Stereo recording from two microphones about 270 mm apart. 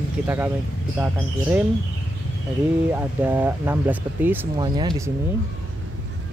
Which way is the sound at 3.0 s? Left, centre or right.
Centre.